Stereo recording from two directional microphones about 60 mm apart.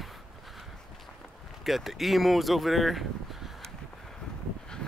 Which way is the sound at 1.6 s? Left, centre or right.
Centre.